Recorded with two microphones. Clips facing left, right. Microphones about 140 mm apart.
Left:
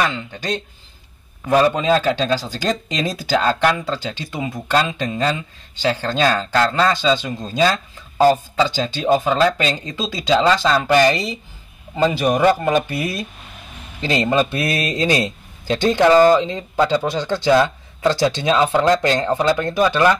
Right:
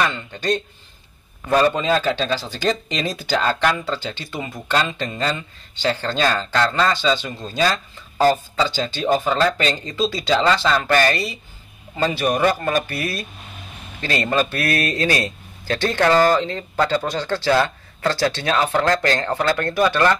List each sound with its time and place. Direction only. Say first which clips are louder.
0.0 s a man's voice: even; 10° left (ahead or behind)